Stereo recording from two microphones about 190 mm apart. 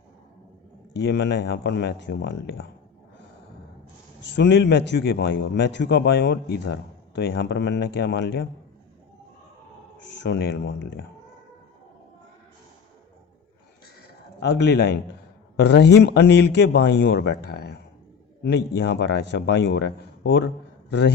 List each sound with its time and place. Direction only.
0.9 s a man's voice: 65° left (ahead or behind)
4.4 s a man's voice: 65° left (ahead or behind)
10.2 s a man's voice: 60° left (ahead or behind)
14.3 s a man's voice: 65° left (ahead or behind)